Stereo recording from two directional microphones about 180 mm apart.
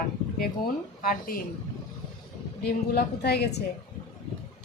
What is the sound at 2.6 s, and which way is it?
Speech, 65° left (ahead or behind).